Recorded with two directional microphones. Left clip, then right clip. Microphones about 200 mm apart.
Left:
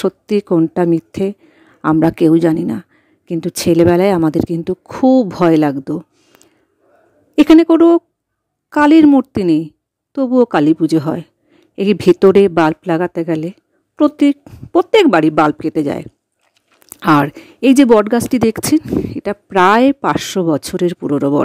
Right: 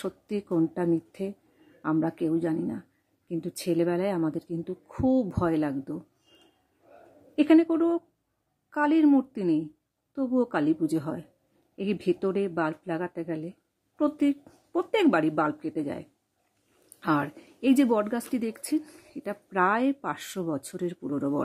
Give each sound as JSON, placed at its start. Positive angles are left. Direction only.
{"t": 0.0, "sound": "speech", "side_deg": 45}
{"t": 7.3, "sound": "a woman's voice", "side_deg": 45}